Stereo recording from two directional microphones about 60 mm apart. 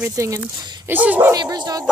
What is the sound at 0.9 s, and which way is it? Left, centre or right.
Speech, right.